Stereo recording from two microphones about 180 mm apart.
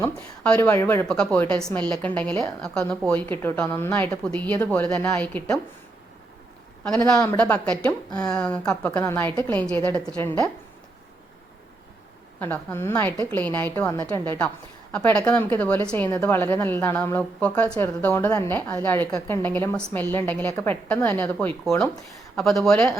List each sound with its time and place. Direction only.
0.4 s a woman's voice: 10° left (ahead or behind)
6.8 s a woman's voice: 5° left (ahead or behind)
12.4 s a woman's voice: 10° left (ahead or behind)
14.9 s a woman's voice: 5° left (ahead or behind)